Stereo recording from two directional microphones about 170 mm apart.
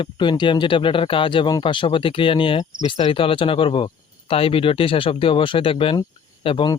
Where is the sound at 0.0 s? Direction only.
30° left (ahead or behind).